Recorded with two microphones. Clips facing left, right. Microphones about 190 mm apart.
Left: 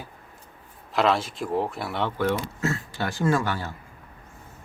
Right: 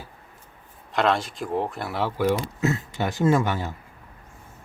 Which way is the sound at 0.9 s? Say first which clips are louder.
Even; centre (ahead or behind).